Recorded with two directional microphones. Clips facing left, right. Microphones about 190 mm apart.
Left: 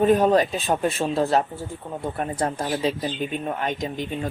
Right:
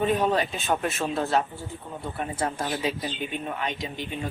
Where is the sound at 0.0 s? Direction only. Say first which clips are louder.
Left 6 dB; 45° left (ahead or behind).